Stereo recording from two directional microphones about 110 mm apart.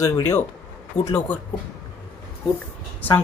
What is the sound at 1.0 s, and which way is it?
Speech, 20° left (ahead or behind).